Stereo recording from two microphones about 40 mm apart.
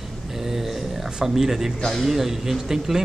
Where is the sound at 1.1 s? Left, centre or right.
Centre.